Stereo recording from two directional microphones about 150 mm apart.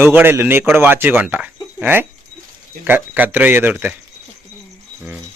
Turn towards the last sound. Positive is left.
turn(degrees=-15)  # may be behind; listen again after turning